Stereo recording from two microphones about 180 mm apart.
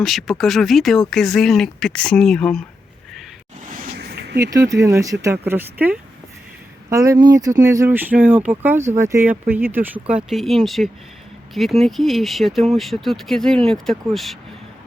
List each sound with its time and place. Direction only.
0.0 s speech: centre (ahead or behind)
3.7 s a sound: 55° right (ahead or behind)
4.4 s speech: 15° right (ahead or behind); by 14.3 s centre (ahead or behind)